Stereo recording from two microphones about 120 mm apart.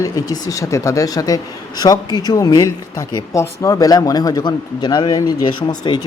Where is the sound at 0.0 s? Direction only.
30° left (ahead or behind).